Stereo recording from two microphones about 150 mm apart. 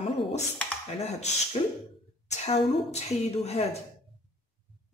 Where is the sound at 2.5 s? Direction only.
45° left (ahead or behind).